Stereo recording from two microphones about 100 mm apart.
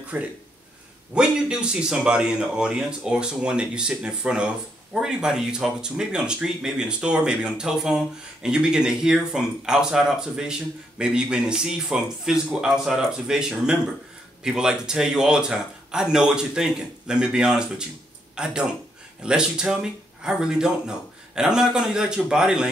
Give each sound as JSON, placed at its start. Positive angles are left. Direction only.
{"t": 0.1, "sound": "speech", "side_deg": -15}